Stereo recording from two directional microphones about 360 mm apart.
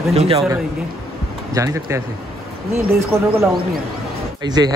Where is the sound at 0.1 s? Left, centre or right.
Centre.